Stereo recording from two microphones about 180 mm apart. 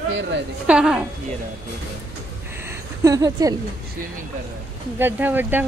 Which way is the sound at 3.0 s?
20° right (ahead or behind).